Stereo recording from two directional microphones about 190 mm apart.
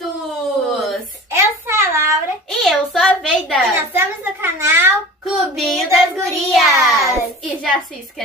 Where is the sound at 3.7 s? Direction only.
10° right (ahead or behind).